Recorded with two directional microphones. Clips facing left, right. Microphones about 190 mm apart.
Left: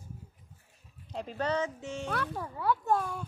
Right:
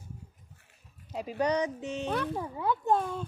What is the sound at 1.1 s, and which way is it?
A child's voice, 10° right (ahead or behind).